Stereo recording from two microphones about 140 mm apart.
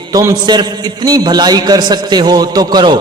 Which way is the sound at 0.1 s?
25° right (ahead or behind).